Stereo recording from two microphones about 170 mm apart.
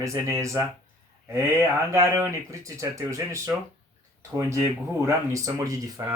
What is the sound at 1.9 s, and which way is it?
Speech, 15° right (ahead or behind).